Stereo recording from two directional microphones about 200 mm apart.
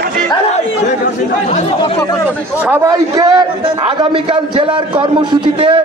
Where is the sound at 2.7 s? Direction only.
15° right (ahead or behind).